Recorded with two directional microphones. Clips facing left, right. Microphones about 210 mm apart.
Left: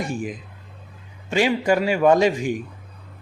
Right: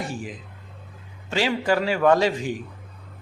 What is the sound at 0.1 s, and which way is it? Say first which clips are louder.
Speech: left 5 dB; 15° left (ahead or behind).